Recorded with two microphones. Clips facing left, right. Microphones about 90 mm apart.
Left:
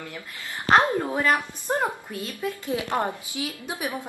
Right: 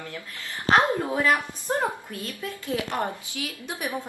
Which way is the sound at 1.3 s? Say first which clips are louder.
Even; 15° left (ahead or behind).